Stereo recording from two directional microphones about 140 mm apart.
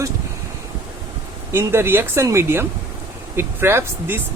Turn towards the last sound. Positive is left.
turn(degrees=-15)  # may be behind; listen again after turning